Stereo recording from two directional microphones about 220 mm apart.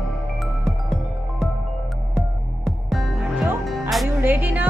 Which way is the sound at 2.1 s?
Centre (ahead or behind).